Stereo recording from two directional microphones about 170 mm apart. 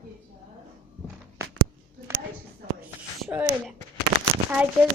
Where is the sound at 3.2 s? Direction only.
10° right (ahead or behind).